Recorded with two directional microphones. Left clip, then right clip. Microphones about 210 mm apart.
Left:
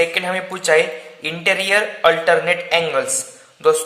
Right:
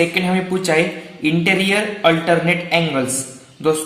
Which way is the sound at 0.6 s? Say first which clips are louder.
Left 5 dB; 35° left (ahead or behind).